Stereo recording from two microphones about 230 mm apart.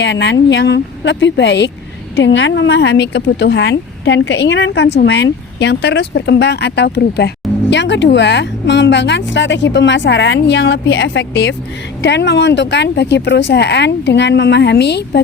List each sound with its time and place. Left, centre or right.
0.0 s a woman's voice: left